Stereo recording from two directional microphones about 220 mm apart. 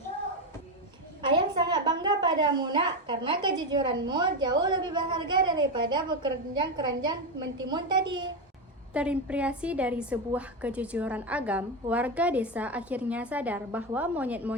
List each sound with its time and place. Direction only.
1.2 s a woman's voice: 20° right (ahead or behind)
8.9 s a woman's voice: 5° right (ahead or behind)